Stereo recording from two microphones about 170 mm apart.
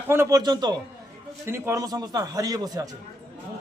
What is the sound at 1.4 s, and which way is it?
Speech, 15° right (ahead or behind).